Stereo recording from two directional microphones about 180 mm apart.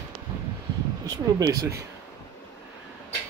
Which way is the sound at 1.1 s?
20° right (ahead or behind).